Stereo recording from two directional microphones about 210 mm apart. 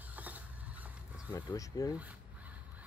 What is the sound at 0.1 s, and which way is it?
Mechanisms, 5° right (ahead or behind).